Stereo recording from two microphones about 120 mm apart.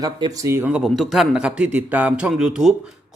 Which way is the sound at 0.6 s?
5° right (ahead or behind).